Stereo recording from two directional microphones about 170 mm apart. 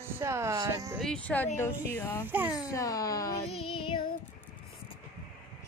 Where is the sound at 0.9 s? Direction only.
5° left (ahead or behind).